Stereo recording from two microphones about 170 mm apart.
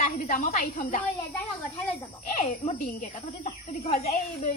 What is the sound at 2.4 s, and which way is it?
Speech, 50° left (ahead or behind).